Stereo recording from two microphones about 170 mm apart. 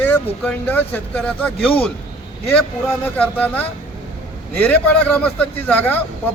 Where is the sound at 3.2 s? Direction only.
10° left (ahead or behind).